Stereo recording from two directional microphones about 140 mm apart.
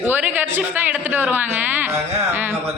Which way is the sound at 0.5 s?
15° right (ahead or behind).